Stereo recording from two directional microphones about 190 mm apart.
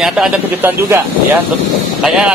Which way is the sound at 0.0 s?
5° right (ahead or behind).